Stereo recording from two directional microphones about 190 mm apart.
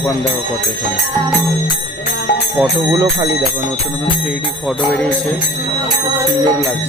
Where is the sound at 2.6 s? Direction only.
20° right (ahead or behind).